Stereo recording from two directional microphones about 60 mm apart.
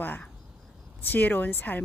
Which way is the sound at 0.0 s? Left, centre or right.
Left.